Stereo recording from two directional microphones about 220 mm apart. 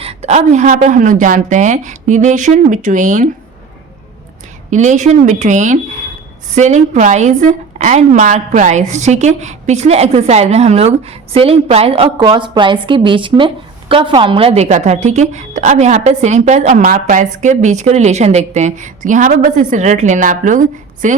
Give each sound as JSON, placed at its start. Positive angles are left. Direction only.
{"t": 0.0, "sound": "a woman's voice", "side_deg": -30}
{"t": 4.7, "sound": "a woman's voice", "side_deg": -35}